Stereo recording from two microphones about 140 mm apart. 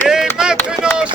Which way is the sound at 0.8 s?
5° right (ahead or behind).